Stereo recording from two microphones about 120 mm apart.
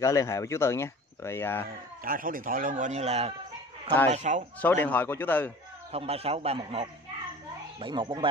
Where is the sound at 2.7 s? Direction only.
80° right; by 3.3 s 60° right (ahead or behind).